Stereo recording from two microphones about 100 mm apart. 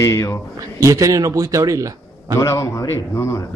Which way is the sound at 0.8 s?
35° right (ahead or behind).